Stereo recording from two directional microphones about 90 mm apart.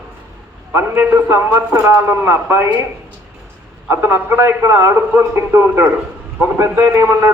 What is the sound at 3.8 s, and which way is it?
A man's voice, 25° right (ahead or behind).